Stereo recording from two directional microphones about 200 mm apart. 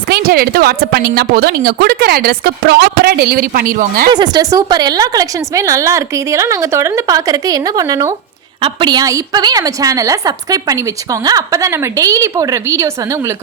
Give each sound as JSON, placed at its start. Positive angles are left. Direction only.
{"t": 0.1, "sound": "a woman's voice", "side_deg": -50}
{"t": 4.1, "sound": "a woman's voice", "side_deg": -20}